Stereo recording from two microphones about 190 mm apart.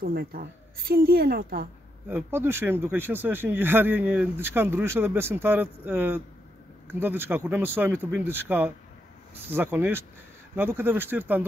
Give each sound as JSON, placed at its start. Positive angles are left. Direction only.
{"t": 0.0, "sound": "a woman's voice", "side_deg": -50}
{"t": 2.0, "sound": "speech", "side_deg": -10}